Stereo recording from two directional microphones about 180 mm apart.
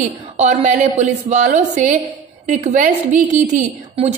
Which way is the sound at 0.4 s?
40° right (ahead or behind).